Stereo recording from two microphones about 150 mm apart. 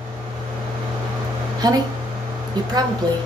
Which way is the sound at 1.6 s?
25° right (ahead or behind).